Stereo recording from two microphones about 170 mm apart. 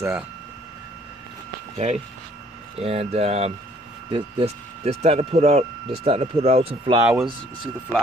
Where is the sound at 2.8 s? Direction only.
35° right (ahead or behind).